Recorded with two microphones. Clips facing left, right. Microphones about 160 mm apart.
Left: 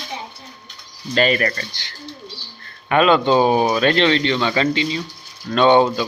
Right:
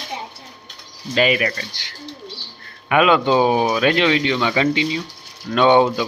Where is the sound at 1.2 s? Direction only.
10° right (ahead or behind).